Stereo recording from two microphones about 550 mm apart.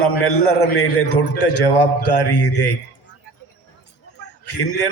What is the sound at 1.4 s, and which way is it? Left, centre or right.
A man's voice, left.